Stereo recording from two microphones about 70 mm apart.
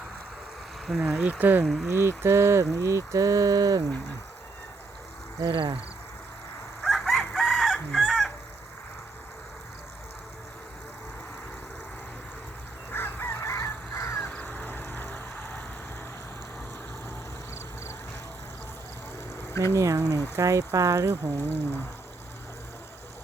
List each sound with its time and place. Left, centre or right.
0.9 s speech: centre
1.2 s speech: right
1.6 s speech: centre
1.9 s speech: right
5.4 s speech: right
6.8 s chicken: centre
12.9 s fowl: left
13.4 s crow: left
14.2 s crow: left
19.4 s a sound: left
19.7 s speech: right
21.4 s speech: left